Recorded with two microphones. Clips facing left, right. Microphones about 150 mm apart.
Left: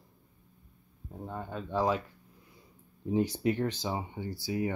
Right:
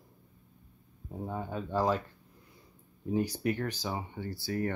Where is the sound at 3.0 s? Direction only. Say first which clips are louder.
Left 2 dB; 20° left (ahead or behind).